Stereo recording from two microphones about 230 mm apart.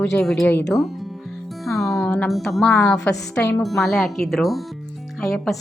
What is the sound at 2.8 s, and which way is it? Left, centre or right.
Speech, centre.